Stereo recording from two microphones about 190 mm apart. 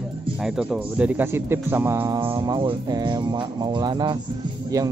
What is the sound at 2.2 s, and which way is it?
Speech, 25° right (ahead or behind).